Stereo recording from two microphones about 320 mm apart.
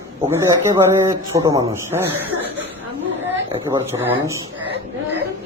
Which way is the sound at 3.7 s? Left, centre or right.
Centre.